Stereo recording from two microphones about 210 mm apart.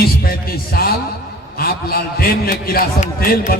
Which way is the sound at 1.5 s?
45° left (ahead or behind).